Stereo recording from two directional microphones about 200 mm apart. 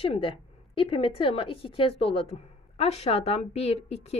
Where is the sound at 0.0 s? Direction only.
30° left (ahead or behind).